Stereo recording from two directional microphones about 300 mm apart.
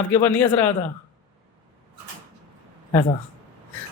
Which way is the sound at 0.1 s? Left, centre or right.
Centre.